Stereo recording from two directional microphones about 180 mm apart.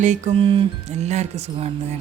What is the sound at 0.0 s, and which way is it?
Speech, 40° right (ahead or behind).